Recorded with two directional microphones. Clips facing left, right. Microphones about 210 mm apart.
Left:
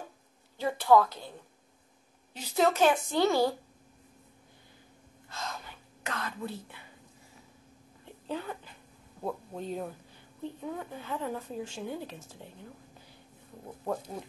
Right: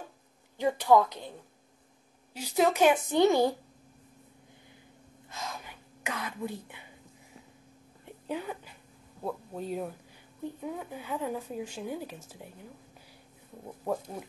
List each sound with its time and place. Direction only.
0.6 s speech: 15° right (ahead or behind)
2.3 s speech: 10° right (ahead or behind)
5.3 s whispering: 15° right (ahead or behind)
8.0 s a sound: 15° right (ahead or behind)
9.2 s speech: 5° right (ahead or behind)